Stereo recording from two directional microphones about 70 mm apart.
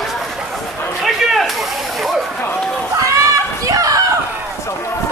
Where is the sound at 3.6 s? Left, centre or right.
Right.